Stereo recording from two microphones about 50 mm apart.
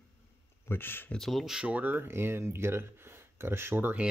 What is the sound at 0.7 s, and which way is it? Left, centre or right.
Speech, left.